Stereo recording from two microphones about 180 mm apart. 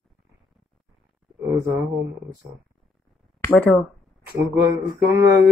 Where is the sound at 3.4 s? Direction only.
5° left (ahead or behind).